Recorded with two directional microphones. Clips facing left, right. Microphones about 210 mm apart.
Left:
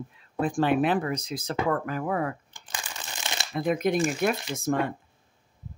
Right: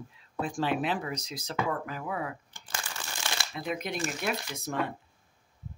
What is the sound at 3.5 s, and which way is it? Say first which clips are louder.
Speech: left 11 dB; 50° left (ahead or behind).